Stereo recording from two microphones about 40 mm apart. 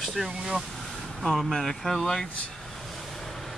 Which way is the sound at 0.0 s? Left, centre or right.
Centre.